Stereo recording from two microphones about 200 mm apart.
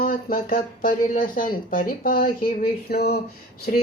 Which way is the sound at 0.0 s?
45° left (ahead or behind).